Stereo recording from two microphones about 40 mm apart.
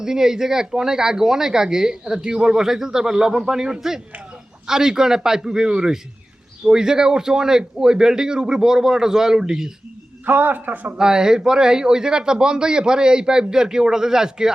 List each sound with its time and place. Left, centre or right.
0.0 s speech: centre
10.2 s a man's voice: right
10.9 s speech: centre